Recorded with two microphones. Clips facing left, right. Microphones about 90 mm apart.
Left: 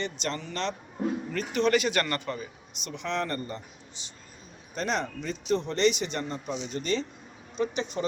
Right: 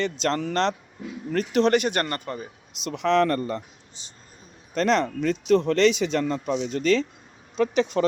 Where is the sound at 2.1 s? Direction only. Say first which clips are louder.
Right 1 dB; 40° right (ahead or behind).